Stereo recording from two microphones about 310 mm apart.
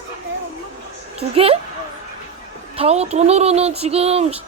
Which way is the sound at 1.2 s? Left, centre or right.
Centre.